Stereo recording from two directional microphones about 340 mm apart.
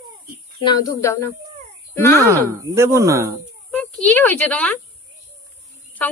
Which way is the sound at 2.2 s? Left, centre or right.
Centre.